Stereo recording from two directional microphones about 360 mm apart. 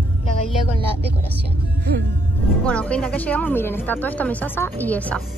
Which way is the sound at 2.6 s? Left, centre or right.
Centre.